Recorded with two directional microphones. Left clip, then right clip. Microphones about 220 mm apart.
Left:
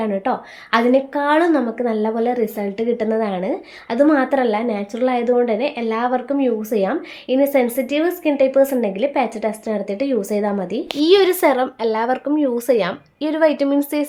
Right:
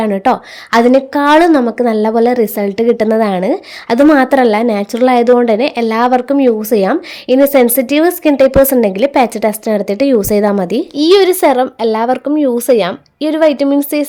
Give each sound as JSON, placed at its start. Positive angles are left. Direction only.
{"t": 0.0, "sound": "a woman's voice", "side_deg": -50}
{"t": 11.0, "sound": "speech", "side_deg": -30}